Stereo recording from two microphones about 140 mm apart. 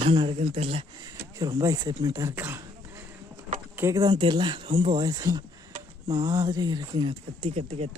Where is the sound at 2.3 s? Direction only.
15° right (ahead or behind).